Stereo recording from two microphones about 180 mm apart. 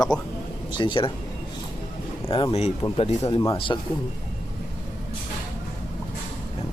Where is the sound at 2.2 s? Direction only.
30° left (ahead or behind).